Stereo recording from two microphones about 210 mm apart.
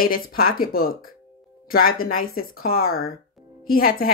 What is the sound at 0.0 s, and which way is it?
Speech, 45° left (ahead or behind).